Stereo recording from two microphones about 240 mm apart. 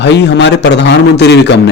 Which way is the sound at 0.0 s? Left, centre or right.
Left.